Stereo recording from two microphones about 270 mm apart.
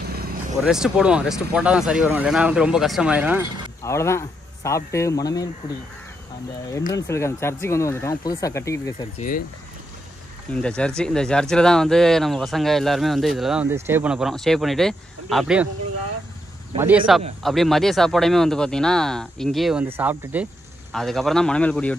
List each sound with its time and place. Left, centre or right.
0.0 s vehicle: right
0.7 s speech: centre
3.8 s speech: centre
6.9 s speech: centre
10.5 s speech: centre
16.7 s speech: centre